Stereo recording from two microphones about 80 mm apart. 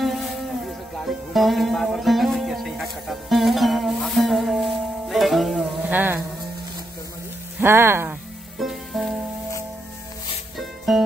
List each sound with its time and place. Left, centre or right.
0.0 s a sound: centre
0.9 s music: centre
5.9 s a sound: right
7.6 s speech: right
8.5 s music: centre
10.6 s music: centre